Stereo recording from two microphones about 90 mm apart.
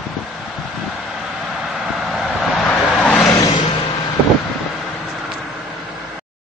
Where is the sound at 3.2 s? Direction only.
35° left (ahead or behind).